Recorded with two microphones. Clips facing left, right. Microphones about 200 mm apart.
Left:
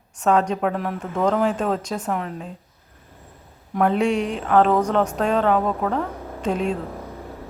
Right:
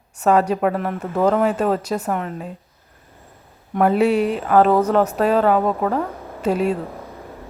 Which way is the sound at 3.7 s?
5° right (ahead or behind).